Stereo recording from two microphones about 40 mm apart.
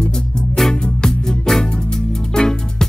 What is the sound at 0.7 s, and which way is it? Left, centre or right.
Music, left.